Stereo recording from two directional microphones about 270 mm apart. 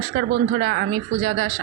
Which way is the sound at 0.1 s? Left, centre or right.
Right.